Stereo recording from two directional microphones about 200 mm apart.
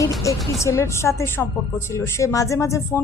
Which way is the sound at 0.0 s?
15° left (ahead or behind).